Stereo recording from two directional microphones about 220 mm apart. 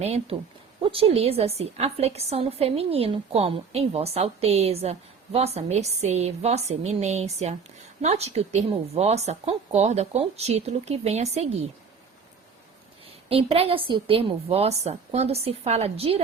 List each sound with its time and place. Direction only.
0.0 s a woman's voice: 30° right (ahead or behind)
13.2 s a woman's voice: 25° right (ahead or behind)